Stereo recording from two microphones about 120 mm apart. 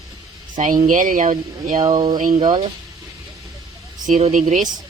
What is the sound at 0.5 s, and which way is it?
Speech, 90° right.